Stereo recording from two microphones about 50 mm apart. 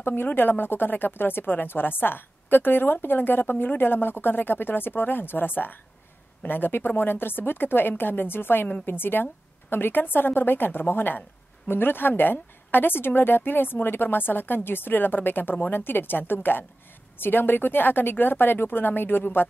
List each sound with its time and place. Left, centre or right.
0.0 s a woman's voice: left